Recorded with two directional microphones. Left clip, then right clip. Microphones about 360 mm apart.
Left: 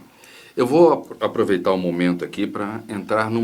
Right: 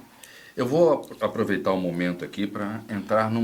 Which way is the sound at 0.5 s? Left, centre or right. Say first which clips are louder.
Left 5 dB; right.